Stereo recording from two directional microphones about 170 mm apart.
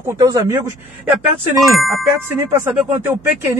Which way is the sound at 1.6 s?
Centre (ahead or behind).